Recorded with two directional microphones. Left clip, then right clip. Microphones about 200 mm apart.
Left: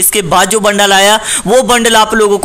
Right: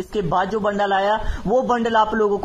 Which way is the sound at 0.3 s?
40° left (ahead or behind).